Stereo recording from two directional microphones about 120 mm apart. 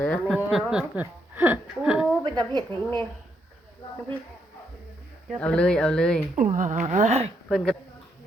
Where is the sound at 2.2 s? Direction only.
35° right (ahead or behind).